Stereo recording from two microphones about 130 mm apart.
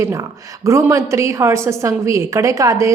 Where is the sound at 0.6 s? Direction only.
20° right (ahead or behind).